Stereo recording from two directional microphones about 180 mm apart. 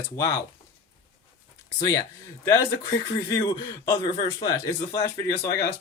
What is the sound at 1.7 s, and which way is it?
Speech, 20° left (ahead or behind).